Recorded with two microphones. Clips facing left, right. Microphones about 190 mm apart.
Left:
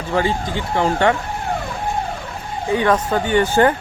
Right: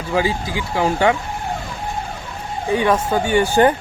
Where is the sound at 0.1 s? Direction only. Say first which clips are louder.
Even; 5° right (ahead or behind).